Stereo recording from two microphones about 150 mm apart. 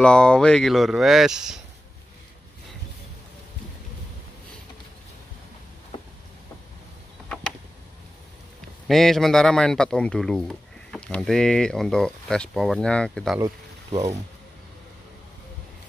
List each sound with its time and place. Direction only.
0.0 s speech: 5° left (ahead or behind)
8.8 s speech: centre (ahead or behind)
13.8 s ratchet: 45° right (ahead or behind)